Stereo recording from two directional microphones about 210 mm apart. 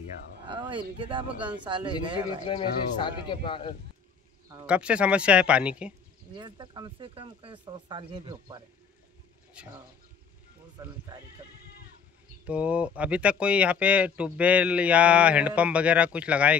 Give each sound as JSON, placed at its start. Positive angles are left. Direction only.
{"t": 0.5, "sound": "speech", "side_deg": -20}
{"t": 2.4, "sound": "a man's voice", "side_deg": 20}
{"t": 4.6, "sound": "speech", "side_deg": -5}
{"t": 6.3, "sound": "speech", "side_deg": -20}
{"t": 9.6, "sound": "speech", "side_deg": -5}
{"t": 12.4, "sound": "speech", "side_deg": -5}